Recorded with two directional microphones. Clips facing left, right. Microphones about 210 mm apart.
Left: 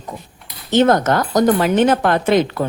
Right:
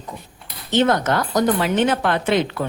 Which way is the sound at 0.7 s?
45° left (ahead or behind).